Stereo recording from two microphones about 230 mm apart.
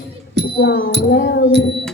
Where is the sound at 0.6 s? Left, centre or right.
Left.